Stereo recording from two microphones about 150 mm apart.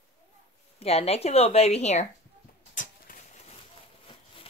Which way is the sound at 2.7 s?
60° left (ahead or behind).